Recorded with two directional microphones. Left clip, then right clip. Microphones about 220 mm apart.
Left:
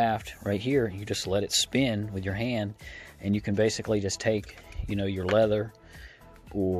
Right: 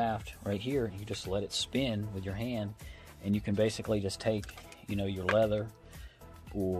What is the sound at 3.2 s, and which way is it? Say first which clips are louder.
Speech: left 5 dB; 30° left (ahead or behind).